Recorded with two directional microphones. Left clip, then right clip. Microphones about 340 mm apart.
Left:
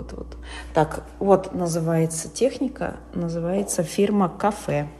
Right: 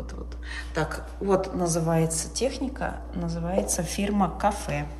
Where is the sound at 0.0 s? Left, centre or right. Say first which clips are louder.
Left 3 dB; centre.